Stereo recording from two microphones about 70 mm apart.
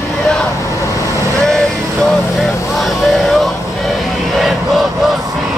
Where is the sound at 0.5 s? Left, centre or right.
Left.